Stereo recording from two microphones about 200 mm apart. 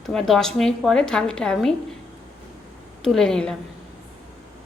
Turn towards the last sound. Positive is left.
turn(degrees=5)  # may be behind; listen again after turning